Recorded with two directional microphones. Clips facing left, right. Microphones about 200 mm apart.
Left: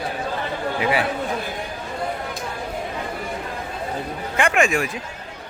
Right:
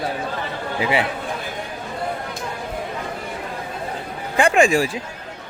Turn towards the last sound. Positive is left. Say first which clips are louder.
# right 4 dB
turn(degrees=-30)  # may be behind; listen again after turning